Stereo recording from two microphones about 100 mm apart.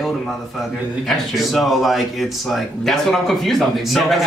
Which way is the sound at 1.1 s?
Centre (ahead or behind).